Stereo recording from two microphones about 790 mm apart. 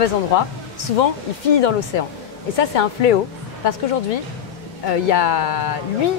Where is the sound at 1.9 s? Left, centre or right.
Left.